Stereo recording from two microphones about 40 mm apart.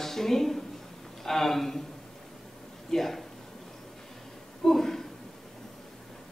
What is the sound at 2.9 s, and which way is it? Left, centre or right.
Speech, centre.